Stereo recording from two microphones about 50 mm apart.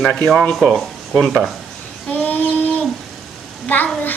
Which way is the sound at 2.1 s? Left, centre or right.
Left.